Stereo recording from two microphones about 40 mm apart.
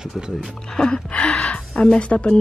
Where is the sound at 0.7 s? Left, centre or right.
Centre.